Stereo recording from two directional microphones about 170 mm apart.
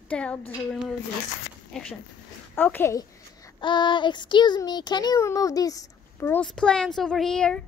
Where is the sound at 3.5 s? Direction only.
25° left (ahead or behind); by 7.6 s 5° left (ahead or behind).